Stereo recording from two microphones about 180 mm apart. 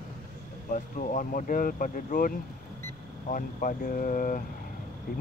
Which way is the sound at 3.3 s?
50° left (ahead or behind).